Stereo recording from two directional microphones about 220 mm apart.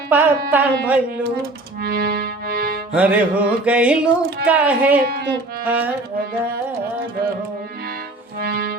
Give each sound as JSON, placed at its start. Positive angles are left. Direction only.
{"t": 0.1, "sound": "a woman's voice", "side_deg": -10}
{"t": 1.4, "sound": "music", "side_deg": -45}
{"t": 2.9, "sound": "music", "side_deg": -5}
{"t": 4.4, "sound": "a woman's voice", "side_deg": -5}
{"t": 8.4, "sound": "music", "side_deg": -45}